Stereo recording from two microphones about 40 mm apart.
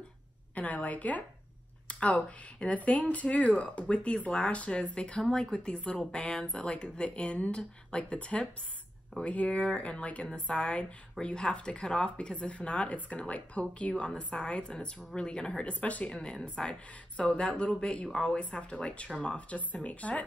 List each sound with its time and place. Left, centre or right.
0.6 s speech: left
6.4 s speech: left
15.6 s speech: left
16.1 s speech: left
17.2 s speech: left